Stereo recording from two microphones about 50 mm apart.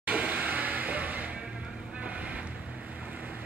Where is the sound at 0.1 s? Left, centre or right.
Right.